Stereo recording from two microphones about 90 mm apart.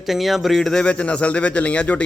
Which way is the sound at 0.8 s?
15° left (ahead or behind).